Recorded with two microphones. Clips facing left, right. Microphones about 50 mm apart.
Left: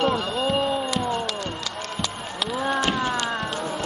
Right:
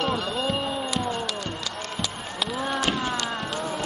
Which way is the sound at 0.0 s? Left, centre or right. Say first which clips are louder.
Left 3 dB; centre.